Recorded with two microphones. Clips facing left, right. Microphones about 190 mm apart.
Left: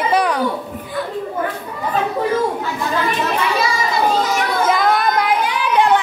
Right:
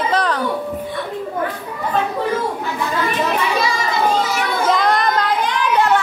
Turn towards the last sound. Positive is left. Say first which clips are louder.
# left 1 dB
turn(degrees=15)  # may be behind; listen again after turning